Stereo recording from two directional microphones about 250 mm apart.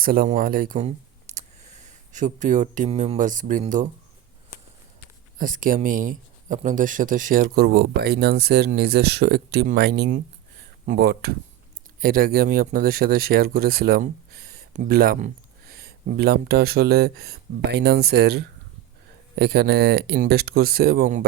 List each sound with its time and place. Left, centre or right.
0.0 s speech: right
5.4 s speech: right